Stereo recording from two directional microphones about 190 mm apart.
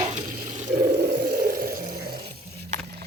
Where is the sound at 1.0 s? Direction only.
55° right (ahead or behind).